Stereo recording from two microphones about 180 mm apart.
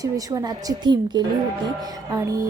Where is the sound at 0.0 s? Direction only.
20° right (ahead or behind).